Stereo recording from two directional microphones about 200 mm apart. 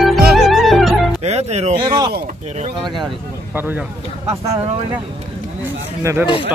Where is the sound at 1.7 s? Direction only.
20° right (ahead or behind).